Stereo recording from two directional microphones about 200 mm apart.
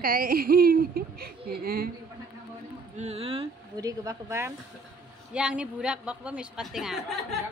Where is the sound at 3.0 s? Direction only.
30° right (ahead or behind).